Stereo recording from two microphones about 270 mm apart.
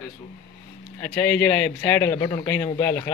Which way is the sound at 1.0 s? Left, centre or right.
Centre.